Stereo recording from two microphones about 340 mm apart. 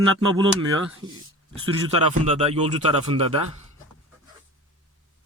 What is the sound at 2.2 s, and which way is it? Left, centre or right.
Speech, centre.